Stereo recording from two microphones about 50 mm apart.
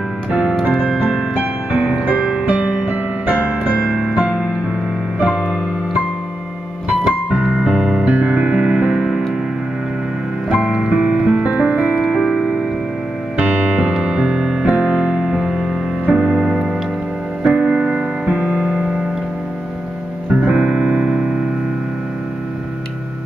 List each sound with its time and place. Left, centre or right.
0.3 s music: right
7.1 s music: right
8.1 s music: right
10.5 s music: right
12.0 s music: centre
13.4 s music: right
20.2 s music: right